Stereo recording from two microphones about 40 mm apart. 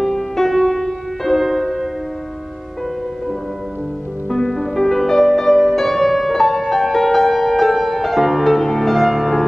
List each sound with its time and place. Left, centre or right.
0.0 s music: centre
4.3 s music: centre